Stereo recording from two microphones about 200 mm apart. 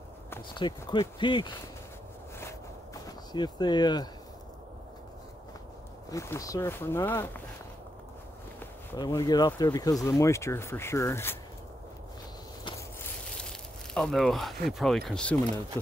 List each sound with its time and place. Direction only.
0.6 s speech: 25° left (ahead or behind)
2.3 s a sound: 15° left (ahead or behind)
6.0 s speech: 15° left (ahead or behind)
8.5 s speech: 15° left (ahead or behind)
12.6 s a sound: 15° left (ahead or behind)
13.4 s speech: 5° left (ahead or behind)